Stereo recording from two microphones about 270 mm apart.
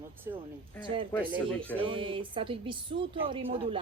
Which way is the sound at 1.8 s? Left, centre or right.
Centre.